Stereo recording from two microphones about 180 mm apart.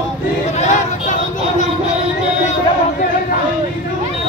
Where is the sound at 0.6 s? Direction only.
40° left (ahead or behind).